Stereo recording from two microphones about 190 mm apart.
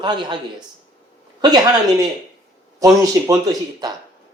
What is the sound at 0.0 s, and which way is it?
Speech, 25° right (ahead or behind).